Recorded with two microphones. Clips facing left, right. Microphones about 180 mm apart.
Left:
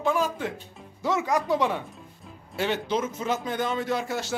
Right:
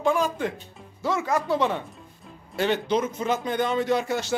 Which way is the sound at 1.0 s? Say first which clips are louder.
Even; 20° left (ahead or behind).